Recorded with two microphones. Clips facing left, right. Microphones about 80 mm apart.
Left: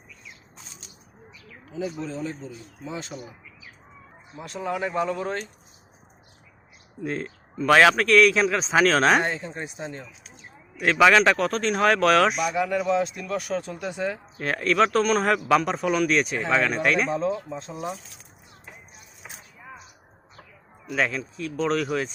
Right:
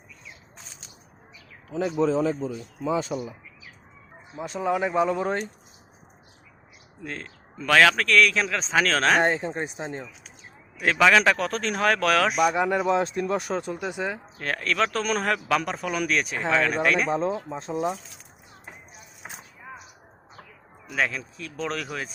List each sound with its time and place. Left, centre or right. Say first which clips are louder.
1.7 s speech: right 7 dB; right
4.4 s speech: right 3 dB; centre
7.0 s speech: left 7 dB; centre
9.2 s speech: right 5 dB; right
10.8 s speech: left 2 dB; centre
12.5 s speech: right 1 dB; right
14.3 s speech: left 5 dB; centre
17.1 s speech: even; right
17.5 s speech: right 3 dB; right
20.9 s speech: left 1 dB; centre